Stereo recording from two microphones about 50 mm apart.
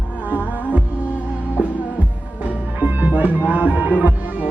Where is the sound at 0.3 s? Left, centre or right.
Right.